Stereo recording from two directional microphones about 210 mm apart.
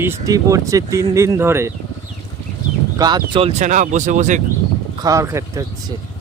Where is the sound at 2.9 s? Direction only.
20° right (ahead or behind); by 4.4 s 35° right (ahead or behind).